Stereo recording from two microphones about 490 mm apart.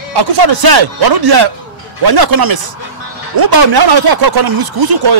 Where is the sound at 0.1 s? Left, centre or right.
Right.